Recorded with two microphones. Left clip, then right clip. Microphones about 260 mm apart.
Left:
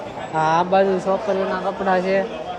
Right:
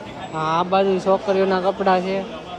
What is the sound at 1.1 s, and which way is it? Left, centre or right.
Speech, right.